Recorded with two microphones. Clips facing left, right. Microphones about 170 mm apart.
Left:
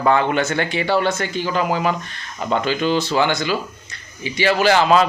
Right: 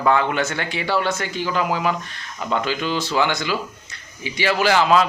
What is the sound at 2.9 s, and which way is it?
Speech, 20° left (ahead or behind).